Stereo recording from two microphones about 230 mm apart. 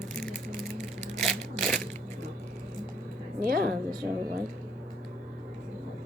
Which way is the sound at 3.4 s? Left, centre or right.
Right.